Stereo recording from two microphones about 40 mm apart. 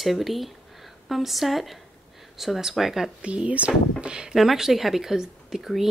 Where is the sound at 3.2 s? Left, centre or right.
Right.